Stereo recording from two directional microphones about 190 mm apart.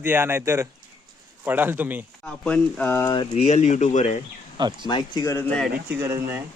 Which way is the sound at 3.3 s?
35° left (ahead or behind).